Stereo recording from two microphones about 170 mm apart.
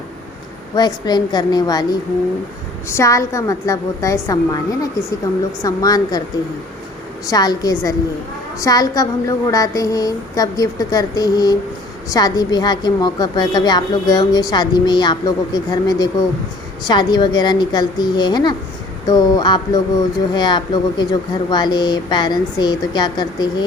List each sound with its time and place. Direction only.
0.8 s a woman's voice: 25° left (ahead or behind)
2.9 s a woman's voice: 15° left (ahead or behind)
7.3 s a woman's voice: 20° left (ahead or behind)